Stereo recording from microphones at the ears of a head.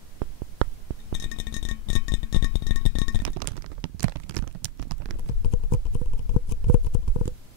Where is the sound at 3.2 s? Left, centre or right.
Right.